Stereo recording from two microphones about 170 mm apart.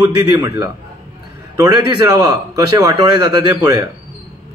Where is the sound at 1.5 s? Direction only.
20° right (ahead or behind).